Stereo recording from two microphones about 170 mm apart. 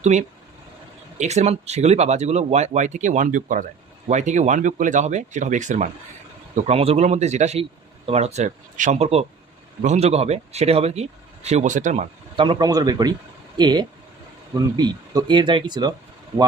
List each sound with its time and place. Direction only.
0.0 s speech: 40° right (ahead or behind)
12.4 s speech: 25° right (ahead or behind)